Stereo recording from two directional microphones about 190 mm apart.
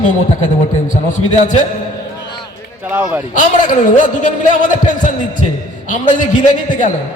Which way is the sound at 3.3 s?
45° left (ahead or behind).